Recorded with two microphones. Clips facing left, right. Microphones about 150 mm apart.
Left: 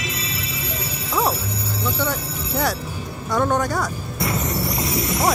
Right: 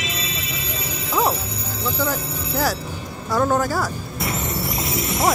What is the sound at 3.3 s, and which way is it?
Speech, centre (ahead or behind).